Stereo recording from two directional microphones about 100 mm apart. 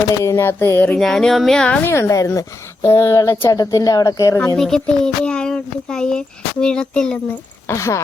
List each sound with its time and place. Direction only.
0.1 s speech: 30° left (ahead or behind)
0.9 s speech: 5° left (ahead or behind)
1.8 s speech: 25° left (ahead or behind)
3.5 s speech: 40° left (ahead or behind)
4.5 s speech: 5° left (ahead or behind)
7.7 s speech: 30° left (ahead or behind)